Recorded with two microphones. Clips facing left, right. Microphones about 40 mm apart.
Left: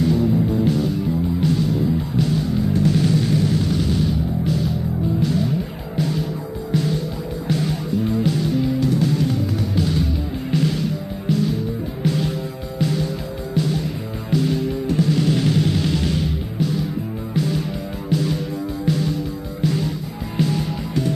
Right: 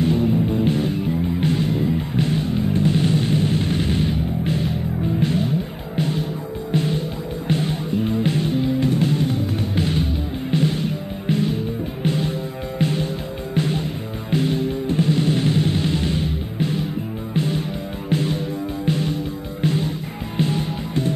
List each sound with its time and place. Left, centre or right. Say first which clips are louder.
0.0 s music: left 1 dB; right